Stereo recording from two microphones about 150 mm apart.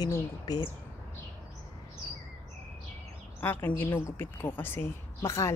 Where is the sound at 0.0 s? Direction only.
25° left (ahead or behind).